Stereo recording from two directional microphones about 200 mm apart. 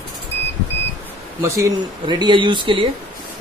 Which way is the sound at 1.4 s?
15° right (ahead or behind).